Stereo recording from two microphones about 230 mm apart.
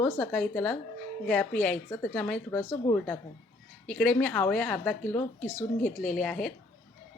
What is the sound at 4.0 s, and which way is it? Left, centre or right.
Speech, centre.